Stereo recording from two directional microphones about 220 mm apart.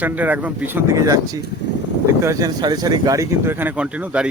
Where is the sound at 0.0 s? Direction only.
5° right (ahead or behind).